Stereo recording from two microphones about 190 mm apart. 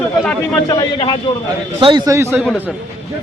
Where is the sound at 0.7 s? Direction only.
20° left (ahead or behind).